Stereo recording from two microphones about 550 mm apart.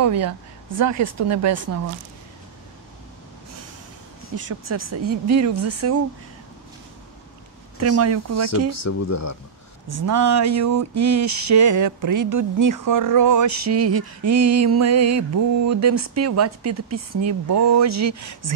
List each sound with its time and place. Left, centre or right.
0.0 s speech: right
4.4 s speech: right
7.8 s speech: right
8.5 s speech: left
9.8 s a sound: right
14.8 s speech: right